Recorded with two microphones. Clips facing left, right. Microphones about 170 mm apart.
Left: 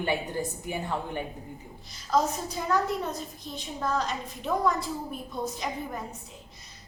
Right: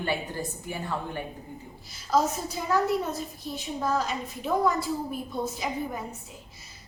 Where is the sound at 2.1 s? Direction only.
5° right (ahead or behind).